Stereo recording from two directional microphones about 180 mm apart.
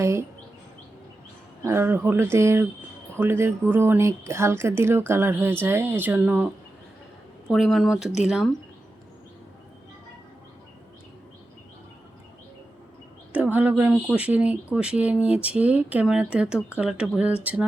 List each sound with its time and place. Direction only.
0.0 s speech: 15° right (ahead or behind)
1.6 s speech: 10° right (ahead or behind)
13.3 s speech: 10° right (ahead or behind)